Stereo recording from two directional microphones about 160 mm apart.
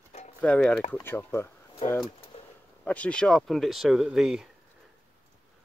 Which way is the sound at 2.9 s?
5° left (ahead or behind).